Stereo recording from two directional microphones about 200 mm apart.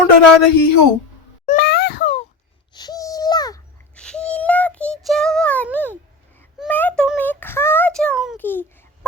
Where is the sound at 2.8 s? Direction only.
20° left (ahead or behind).